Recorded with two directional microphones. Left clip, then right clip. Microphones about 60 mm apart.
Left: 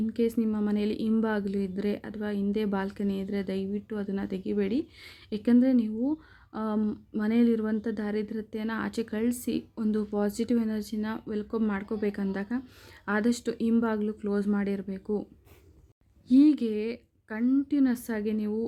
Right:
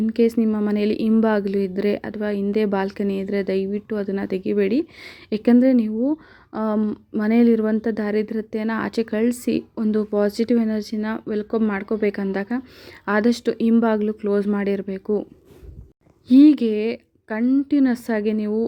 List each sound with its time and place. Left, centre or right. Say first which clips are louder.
0.0 s speech: right 9 dB; right
0.4 s speech: right 8 dB; right
0.7 s a woman's voice: right 9 dB; right
6.5 s a sound: right 9 dB; right
6.7 s speech: right 7 dB; centre
7.2 s a woman's voice: right 9 dB; right
9.8 s a woman's voice: right 9 dB; right
13.3 s a woman's voice: right 8 dB; right
16.3 s speech: right 8 dB; right